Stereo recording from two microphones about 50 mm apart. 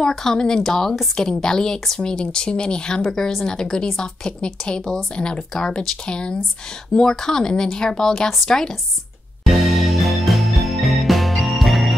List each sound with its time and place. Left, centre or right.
0.1 s speech: centre
9.4 s music: centre